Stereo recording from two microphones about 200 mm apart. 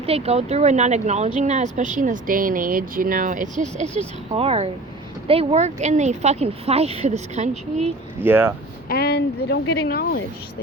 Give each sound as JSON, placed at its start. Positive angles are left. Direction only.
{"t": 0.0, "sound": "speech", "side_deg": -30}
{"t": 8.2, "sound": "speech", "side_deg": -10}
{"t": 8.9, "sound": "speech", "side_deg": 50}